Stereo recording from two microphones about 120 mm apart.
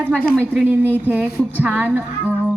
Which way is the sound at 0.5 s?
15° right (ahead or behind).